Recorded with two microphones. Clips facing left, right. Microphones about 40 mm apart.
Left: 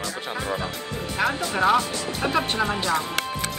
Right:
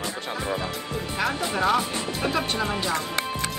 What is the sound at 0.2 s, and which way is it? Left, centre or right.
Music, centre.